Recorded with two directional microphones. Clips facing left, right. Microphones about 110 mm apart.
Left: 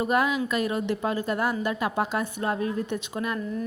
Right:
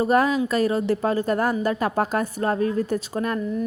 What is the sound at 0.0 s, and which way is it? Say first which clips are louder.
A woman's voice: right 5 dB; 40° right (ahead or behind).